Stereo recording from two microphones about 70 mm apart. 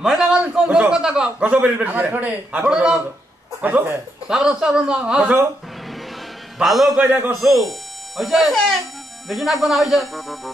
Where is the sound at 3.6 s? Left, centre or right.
Right.